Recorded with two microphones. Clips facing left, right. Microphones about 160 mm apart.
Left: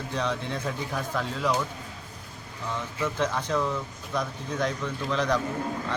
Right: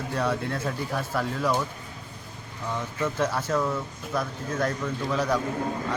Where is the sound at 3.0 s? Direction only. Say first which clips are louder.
Right 1 dB; 10° right (ahead or behind).